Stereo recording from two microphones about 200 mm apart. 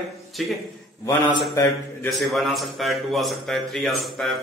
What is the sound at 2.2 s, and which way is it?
A man's voice, centre (ahead or behind).